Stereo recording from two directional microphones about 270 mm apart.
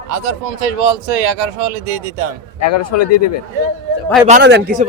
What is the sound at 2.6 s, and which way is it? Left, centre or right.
Speech, left.